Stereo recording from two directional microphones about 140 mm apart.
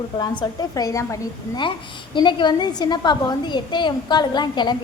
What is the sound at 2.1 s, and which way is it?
A woman's voice, 35° left (ahead or behind).